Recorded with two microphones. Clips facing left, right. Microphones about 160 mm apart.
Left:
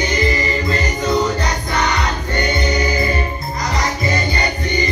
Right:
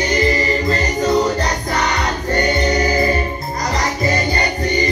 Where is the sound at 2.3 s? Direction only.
40° right (ahead or behind).